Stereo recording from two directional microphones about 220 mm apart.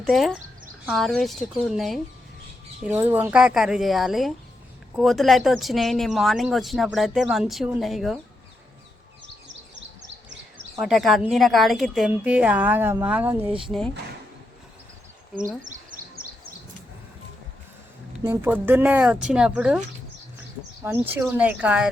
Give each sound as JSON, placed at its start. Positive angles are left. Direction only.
{"t": 0.0, "sound": "speech", "side_deg": 0}
{"t": 10.8, "sound": "speech", "side_deg": 0}
{"t": 15.7, "sound": "bird", "side_deg": -40}
{"t": 18.2, "sound": "speech", "side_deg": -10}
{"t": 20.8, "sound": "speech", "side_deg": -10}